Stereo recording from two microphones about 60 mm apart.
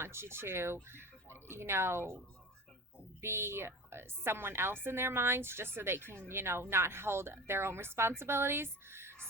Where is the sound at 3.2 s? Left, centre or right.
Right.